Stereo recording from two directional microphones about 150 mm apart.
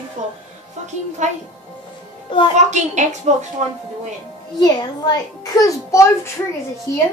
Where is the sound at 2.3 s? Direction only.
35° left (ahead or behind).